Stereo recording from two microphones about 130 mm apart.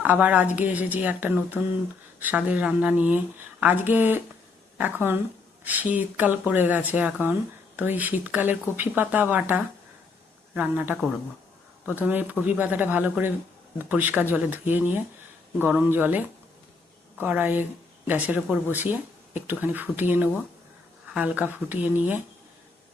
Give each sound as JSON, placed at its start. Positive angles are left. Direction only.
{"t": 0.0, "sound": "speech", "side_deg": -10}